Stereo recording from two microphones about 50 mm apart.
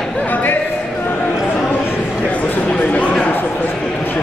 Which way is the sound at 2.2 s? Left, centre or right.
Left.